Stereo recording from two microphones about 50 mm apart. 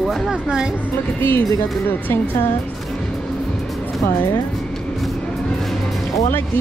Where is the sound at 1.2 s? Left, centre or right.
Left.